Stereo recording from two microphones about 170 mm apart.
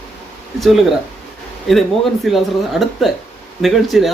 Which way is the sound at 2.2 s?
Centre (ahead or behind).